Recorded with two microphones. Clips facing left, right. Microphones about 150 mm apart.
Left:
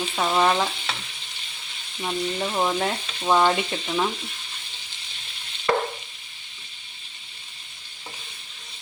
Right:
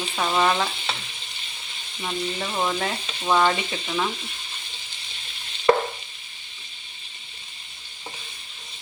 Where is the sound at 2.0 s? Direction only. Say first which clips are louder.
Left 2 dB; 10° left (ahead or behind).